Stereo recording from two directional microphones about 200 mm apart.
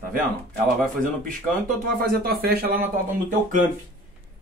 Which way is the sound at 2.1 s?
50° right (ahead or behind).